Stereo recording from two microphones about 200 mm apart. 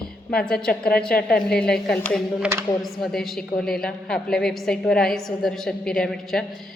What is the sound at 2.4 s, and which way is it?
Speech, 15° right (ahead or behind).